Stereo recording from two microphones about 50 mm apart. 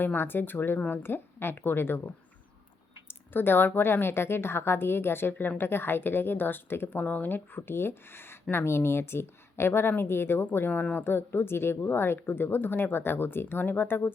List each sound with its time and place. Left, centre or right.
0.0 s a woman's voice: left